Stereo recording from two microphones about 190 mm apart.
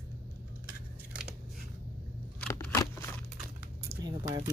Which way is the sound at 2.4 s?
10° left (ahead or behind).